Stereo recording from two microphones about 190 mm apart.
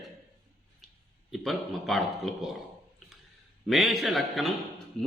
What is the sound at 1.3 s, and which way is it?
A man's voice, centre (ahead or behind).